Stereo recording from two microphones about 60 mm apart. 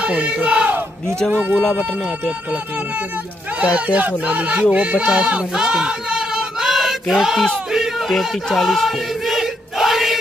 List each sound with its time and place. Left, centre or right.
0.0 s battle cry: centre
1.3 s speech: right; by 7.4 s centre
7.7 s choir: centre